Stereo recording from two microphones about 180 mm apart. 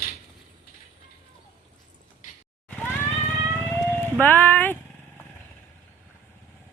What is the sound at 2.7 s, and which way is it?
Vehicle, 10° left (ahead or behind).